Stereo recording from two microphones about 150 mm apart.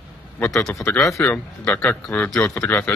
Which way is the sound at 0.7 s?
15° left (ahead or behind).